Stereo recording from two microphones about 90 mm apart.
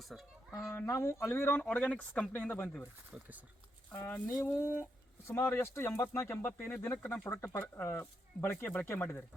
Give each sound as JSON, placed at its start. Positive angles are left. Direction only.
{"t": 0.7, "sound": "speech", "side_deg": 30}
{"t": 1.6, "sound": "speech", "side_deg": 15}
{"t": 3.1, "sound": "speech", "side_deg": -15}
{"t": 3.9, "sound": "speech", "side_deg": 20}